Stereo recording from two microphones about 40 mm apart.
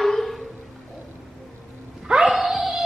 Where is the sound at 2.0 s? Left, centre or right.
Right.